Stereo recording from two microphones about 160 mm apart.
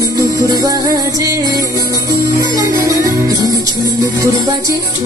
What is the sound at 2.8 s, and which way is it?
Music, 20° right (ahead or behind).